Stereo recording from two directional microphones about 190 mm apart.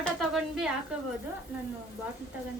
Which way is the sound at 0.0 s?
Centre (ahead or behind).